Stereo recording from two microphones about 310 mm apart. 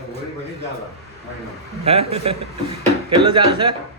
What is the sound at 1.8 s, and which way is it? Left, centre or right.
A man's voice, centre.